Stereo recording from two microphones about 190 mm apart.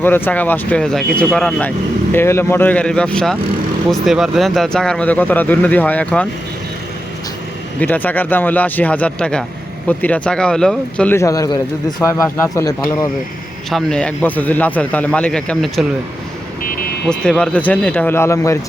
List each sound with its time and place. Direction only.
0.0 s speech: 10° left (ahead or behind)
7.8 s speech: 10° left (ahead or behind)
13.7 s speech: 5° left (ahead or behind)
16.6 s vehicle: 50° left (ahead or behind)
17.1 s speech: 5° left (ahead or behind)